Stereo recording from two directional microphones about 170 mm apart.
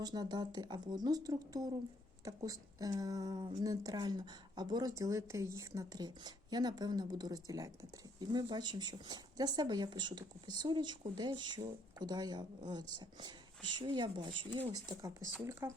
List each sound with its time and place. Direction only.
0.0 s speech: 25° right (ahead or behind)